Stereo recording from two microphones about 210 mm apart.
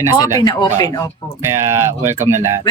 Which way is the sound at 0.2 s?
20° left (ahead or behind).